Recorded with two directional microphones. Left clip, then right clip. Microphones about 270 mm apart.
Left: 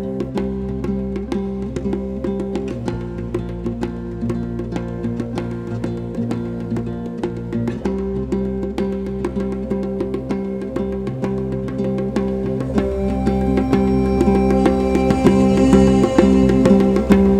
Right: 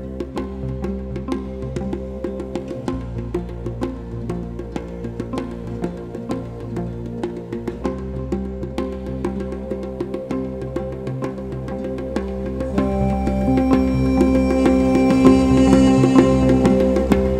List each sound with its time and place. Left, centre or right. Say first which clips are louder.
0.4 s music: left 4 dB; centre
7.6 s music: left 4 dB; centre
11.8 s music: left 4 dB; centre